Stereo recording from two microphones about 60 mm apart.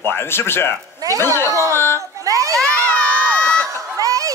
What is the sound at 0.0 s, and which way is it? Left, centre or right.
A man's voice, left.